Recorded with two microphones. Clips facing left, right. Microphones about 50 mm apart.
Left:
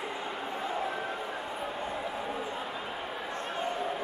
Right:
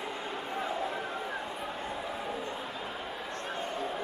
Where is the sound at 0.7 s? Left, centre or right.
Centre.